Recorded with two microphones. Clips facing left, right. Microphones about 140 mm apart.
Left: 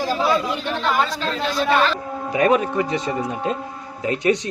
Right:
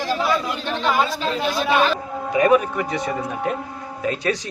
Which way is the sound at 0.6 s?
5° left (ahead or behind).